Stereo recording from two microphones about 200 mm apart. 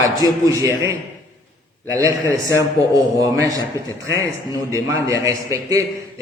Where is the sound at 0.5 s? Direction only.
15° right (ahead or behind).